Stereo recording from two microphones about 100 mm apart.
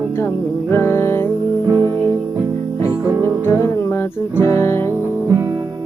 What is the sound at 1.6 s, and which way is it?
Music, 40° right (ahead or behind).